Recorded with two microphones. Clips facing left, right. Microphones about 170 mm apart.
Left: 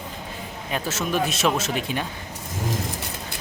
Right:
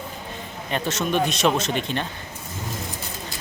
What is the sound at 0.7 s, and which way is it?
Speech, 5° left (ahead or behind).